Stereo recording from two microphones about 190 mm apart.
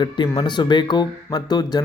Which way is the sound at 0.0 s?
25° left (ahead or behind).